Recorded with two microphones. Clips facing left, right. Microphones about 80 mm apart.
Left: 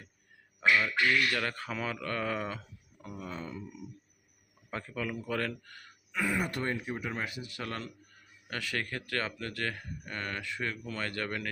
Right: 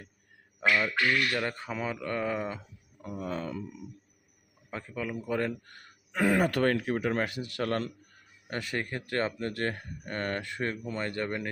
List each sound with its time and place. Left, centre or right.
0.7 s speech: right
1.4 s speech: centre
3.2 s speech: right
4.7 s speech: centre
6.1 s speech: right
8.4 s speech: right
10.8 s speech: right